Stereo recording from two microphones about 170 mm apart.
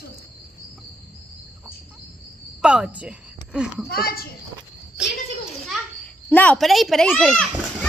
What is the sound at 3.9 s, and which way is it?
Speech, 65° left (ahead or behind).